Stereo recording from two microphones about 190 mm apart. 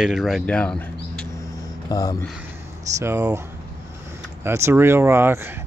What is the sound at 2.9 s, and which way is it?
Speech, 15° right (ahead or behind).